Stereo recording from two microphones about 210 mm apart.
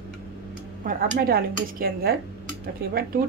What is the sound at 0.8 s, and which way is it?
A woman's voice, 45° right (ahead or behind).